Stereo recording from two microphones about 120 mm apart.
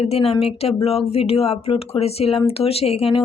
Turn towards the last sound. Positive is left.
turn(degrees=55)  # may be behind; listen again after turning